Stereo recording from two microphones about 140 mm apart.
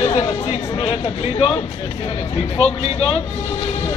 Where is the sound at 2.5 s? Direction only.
45° left (ahead or behind).